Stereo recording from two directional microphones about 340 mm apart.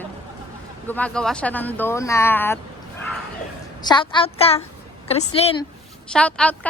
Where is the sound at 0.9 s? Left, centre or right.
Centre.